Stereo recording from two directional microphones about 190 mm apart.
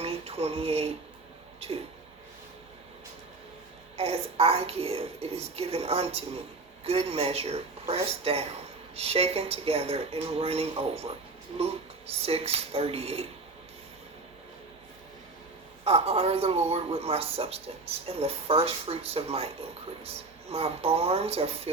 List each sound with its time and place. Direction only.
0.0 s a sound: 30° right (ahead or behind)
3.9 s speech: 30° right (ahead or behind)
15.8 s speech: 30° right (ahead or behind)